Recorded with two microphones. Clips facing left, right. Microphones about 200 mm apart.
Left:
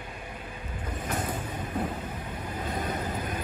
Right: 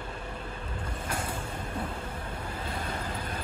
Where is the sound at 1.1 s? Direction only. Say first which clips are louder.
Left 3 dB; 10° right (ahead or behind).